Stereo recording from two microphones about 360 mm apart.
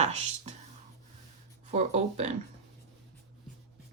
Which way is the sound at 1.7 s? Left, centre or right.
Centre.